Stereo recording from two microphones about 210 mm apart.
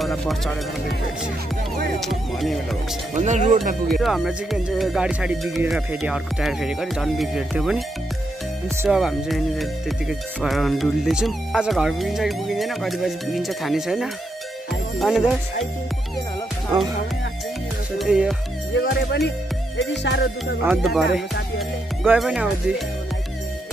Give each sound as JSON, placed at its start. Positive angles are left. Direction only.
{"t": 0.0, "sound": "speech", "side_deg": 0}
{"t": 2.0, "sound": "speech", "side_deg": 0}
{"t": 3.2, "sound": "speech", "side_deg": -35}
{"t": 4.0, "sound": "speech", "side_deg": 0}
{"t": 8.8, "sound": "speech", "side_deg": 0}
{"t": 14.7, "sound": "music", "side_deg": 0}
{"t": 17.9, "sound": "music", "side_deg": -5}
{"t": 18.7, "sound": "speech", "side_deg": 50}
{"t": 19.8, "sound": "music", "side_deg": 55}
{"t": 20.6, "sound": "speech", "side_deg": -5}